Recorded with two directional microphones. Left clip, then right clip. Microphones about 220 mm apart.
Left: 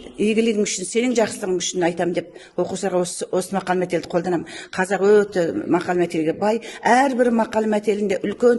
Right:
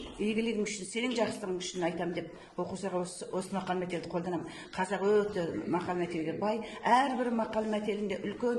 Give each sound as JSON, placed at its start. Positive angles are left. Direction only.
{"t": 0.2, "sound": "a man's voice", "side_deg": 50}